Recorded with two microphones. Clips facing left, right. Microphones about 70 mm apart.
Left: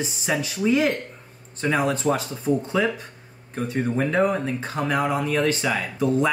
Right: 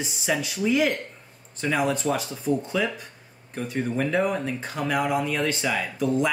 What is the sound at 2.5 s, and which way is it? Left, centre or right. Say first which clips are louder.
Speech: left 2 dB; left.